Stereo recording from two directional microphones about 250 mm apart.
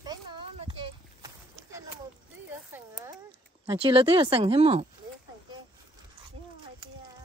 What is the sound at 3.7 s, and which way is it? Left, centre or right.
Speech, right.